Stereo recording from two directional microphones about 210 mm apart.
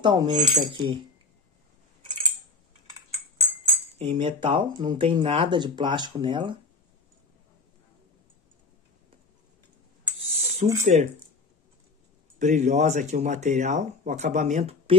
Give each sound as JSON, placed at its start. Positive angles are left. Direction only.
{"t": 0.0, "sound": "speech", "side_deg": -20}
{"t": 4.0, "sound": "speech", "side_deg": -25}
{"t": 10.2, "sound": "a sound", "side_deg": -30}
{"t": 10.8, "sound": "speech", "side_deg": -30}
{"t": 12.4, "sound": "speech", "side_deg": -35}